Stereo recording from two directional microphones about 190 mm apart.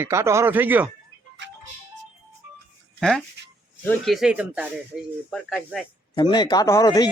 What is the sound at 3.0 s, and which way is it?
Speech, centre (ahead or behind).